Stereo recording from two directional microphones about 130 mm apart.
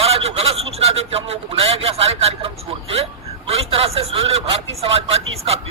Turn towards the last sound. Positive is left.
turn(degrees=-50)  # may be behind; listen again after turning